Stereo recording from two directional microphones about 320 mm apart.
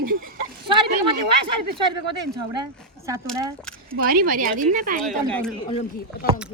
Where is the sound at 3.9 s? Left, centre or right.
Right.